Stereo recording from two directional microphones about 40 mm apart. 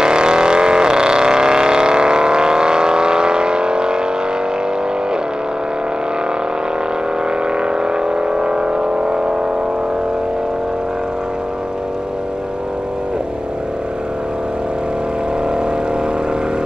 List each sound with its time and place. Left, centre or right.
0.0 s vehicle: right
7.5 s vehicle: right